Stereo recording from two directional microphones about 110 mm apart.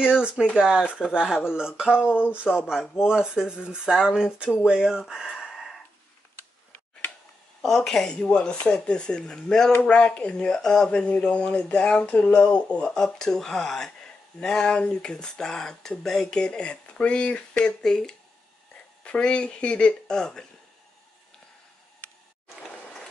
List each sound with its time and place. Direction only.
0.0 s speech: 5° right (ahead or behind)
2.0 s speech: 15° left (ahead or behind)
2.7 s speech: 5° right (ahead or behind)
7.6 s speech: 5° left (ahead or behind)
22.6 s a sound: 5° left (ahead or behind)